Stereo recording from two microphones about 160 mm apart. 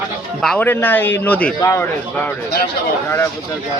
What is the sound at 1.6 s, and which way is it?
Speech, 20° left (ahead or behind).